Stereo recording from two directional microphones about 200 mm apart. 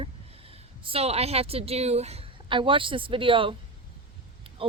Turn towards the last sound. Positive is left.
turn(degrees=-25)  # may be behind; listen again after turning